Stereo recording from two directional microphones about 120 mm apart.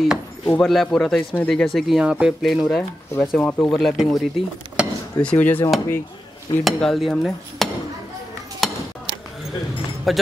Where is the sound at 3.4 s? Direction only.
15° left (ahead or behind).